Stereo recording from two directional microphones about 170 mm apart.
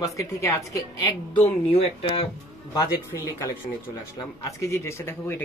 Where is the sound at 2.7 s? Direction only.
15° left (ahead or behind).